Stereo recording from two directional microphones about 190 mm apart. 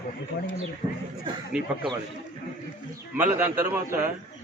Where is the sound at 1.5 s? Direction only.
5° right (ahead or behind).